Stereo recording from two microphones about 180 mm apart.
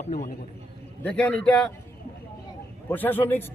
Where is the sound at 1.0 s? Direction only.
5° left (ahead or behind).